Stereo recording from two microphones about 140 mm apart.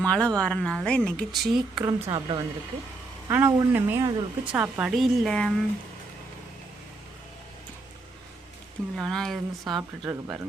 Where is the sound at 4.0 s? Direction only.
30° right (ahead or behind).